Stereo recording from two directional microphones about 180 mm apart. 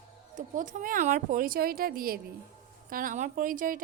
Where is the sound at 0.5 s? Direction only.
45° right (ahead or behind).